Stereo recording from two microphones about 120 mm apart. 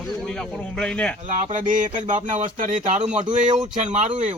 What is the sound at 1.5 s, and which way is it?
Speech, 90° right.